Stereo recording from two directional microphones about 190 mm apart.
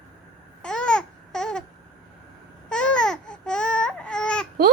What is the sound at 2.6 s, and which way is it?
Baby cry, 5° left (ahead or behind).